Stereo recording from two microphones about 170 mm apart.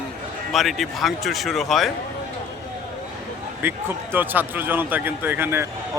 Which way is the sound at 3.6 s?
10° right (ahead or behind).